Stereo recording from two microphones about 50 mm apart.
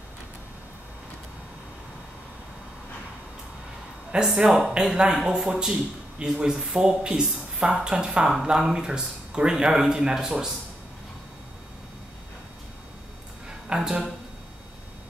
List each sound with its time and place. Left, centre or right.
4.1 s a man's voice: centre
13.7 s speech: centre